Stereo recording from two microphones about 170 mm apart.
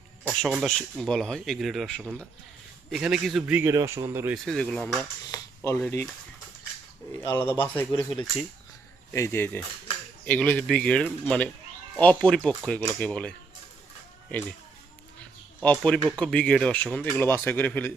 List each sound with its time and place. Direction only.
0.3 s speech: 5° right (ahead or behind)
4.4 s speech: 5° left (ahead or behind)
5.3 s a sound: 20° left (ahead or behind)
5.8 s speech: 10° left (ahead or behind)
7.1 s speech: 15° left (ahead or behind)
9.1 s speech: 15° left (ahead or behind)
15.6 s speech: 5° left (ahead or behind)